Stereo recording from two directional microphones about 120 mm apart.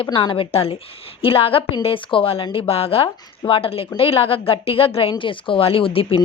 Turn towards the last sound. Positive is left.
turn(degrees=50)  # may be behind; listen again after turning